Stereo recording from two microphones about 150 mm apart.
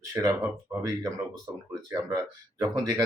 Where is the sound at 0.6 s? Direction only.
20° right (ahead or behind).